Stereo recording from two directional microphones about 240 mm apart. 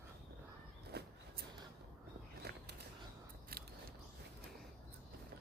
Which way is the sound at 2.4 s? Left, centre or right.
Right.